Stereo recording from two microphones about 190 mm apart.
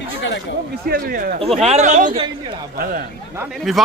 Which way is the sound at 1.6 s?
35° right (ahead or behind).